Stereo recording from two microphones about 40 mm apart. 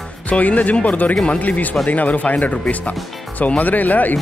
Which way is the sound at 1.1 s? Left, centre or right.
Left.